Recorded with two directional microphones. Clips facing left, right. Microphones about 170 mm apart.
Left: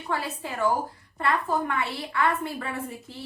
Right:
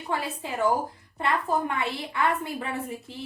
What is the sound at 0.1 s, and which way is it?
A woman's voice, 15° right (ahead or behind).